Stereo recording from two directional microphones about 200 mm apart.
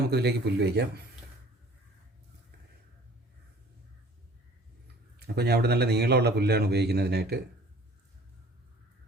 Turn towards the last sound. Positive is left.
turn(degrees=-55)  # may be behind; listen again after turning